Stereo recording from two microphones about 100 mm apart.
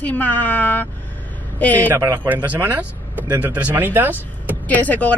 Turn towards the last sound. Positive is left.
turn(degrees=15)  # may be behind; listen again after turning